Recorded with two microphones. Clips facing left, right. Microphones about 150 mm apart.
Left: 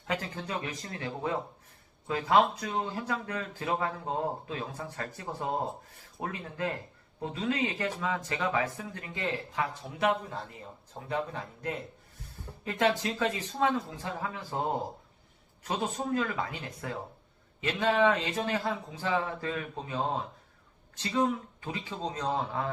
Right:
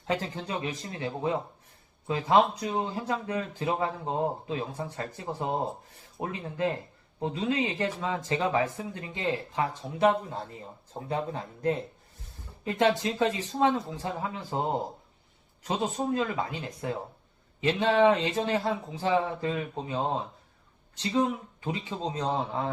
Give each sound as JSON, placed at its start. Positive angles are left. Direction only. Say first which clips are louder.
{"t": 0.3, "sound": "speech", "louder": "right 3 dB", "side_deg": -20}
{"t": 16.1, "sound": "speech", "louder": "right 2 dB", "side_deg": -20}
{"t": 21.6, "sound": "speech", "louder": "right 3 dB", "side_deg": -25}